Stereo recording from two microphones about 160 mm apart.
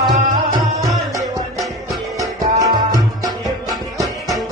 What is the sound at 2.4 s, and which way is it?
Music, 25° right (ahead or behind).